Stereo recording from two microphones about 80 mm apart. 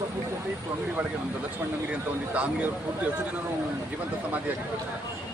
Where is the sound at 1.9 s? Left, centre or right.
Centre.